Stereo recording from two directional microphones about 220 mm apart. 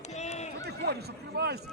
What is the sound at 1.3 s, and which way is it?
Speech, 50° right (ahead or behind).